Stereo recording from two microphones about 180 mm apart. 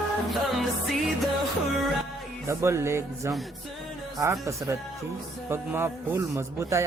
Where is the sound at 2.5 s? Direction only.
15° right (ahead or behind).